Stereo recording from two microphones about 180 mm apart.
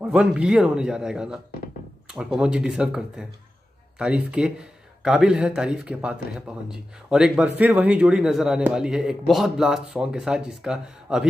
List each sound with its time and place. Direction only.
0.0 s a man's voice: 5° right (ahead or behind)
4.3 s a man's voice: 5° right (ahead or behind)